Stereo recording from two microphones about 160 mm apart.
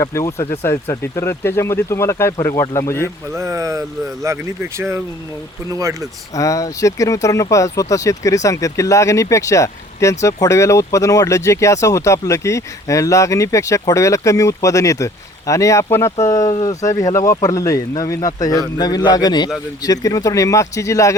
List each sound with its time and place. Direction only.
0.0 s speech: 20° left (ahead or behind)
3.3 s speech: 20° right (ahead or behind)
6.3 s speech: 20° left (ahead or behind)